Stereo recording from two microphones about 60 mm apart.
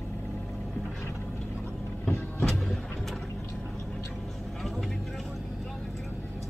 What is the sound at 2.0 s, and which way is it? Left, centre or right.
Vehicle, centre.